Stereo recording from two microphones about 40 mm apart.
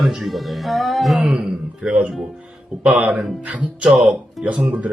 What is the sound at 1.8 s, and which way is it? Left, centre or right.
Speech, right.